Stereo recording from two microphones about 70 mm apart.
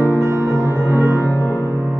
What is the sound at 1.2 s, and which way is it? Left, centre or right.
Music, left.